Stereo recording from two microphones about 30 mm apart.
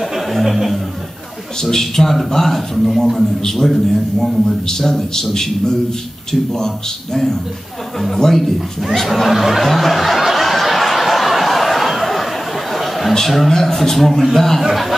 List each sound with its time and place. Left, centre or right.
0.3 s a sound: centre
1.6 s a man's voice: centre
8.2 s a man's voice: centre
8.9 s snicker: centre
12.7 s a sound: centre
13.5 s a man's voice: centre